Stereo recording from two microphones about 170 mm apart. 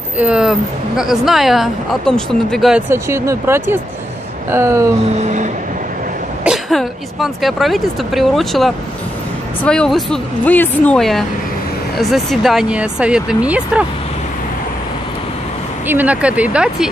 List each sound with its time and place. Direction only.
0.2 s speech: 5° right (ahead or behind)
2.9 s speech: 15° right (ahead or behind)
5.2 s a sound: 45° right (ahead or behind)
6.4 s speech: centre (ahead or behind)
15.9 s speech: 10° right (ahead or behind)